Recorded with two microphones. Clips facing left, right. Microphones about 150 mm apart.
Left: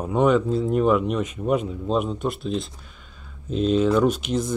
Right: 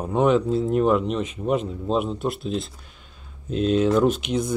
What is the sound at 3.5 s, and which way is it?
Speech, centre (ahead or behind).